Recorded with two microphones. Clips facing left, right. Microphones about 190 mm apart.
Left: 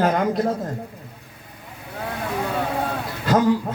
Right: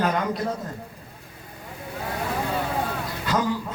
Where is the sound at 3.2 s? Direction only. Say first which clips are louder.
Left 7 dB; 50° left (ahead or behind).